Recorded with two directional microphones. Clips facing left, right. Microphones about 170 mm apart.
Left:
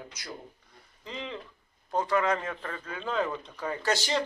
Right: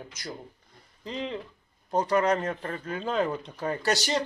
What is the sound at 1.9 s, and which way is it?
Speech, 40° right (ahead or behind).